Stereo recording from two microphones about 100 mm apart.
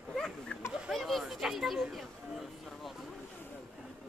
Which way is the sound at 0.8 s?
Centre (ahead or behind).